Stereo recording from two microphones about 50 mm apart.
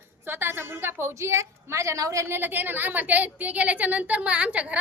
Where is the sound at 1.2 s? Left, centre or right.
Right.